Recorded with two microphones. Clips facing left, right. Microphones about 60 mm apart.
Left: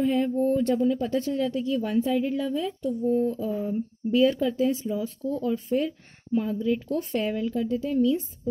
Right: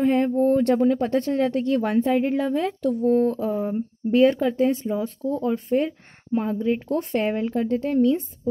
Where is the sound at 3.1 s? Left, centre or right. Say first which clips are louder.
Right 4 dB; right.